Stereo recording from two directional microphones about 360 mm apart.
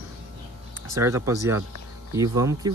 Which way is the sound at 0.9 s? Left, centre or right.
Centre.